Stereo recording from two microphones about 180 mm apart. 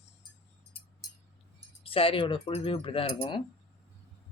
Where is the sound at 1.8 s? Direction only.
30° left (ahead or behind).